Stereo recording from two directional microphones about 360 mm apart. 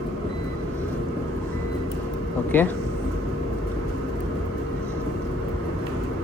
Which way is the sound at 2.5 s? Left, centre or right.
Centre.